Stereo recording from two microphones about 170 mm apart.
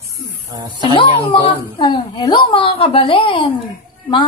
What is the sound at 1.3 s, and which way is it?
A woman's voice, 30° left (ahead or behind).